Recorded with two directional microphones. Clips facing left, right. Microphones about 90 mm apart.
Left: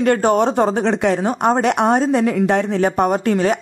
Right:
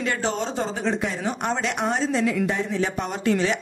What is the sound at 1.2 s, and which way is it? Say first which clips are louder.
A woman's voice: left 9 dB; 50° left (ahead or behind).